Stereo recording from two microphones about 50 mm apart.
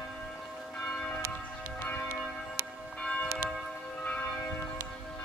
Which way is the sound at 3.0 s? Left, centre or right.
Left.